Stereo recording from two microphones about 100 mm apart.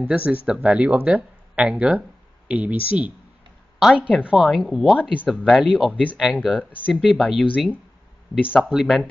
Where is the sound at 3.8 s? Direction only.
5° right (ahead or behind).